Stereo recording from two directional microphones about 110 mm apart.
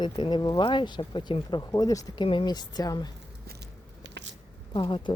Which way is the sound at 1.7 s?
35° left (ahead or behind).